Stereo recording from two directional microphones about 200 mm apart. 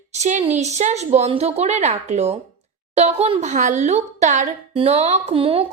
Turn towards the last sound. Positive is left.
turn(degrees=-25)  # may be behind; listen again after turning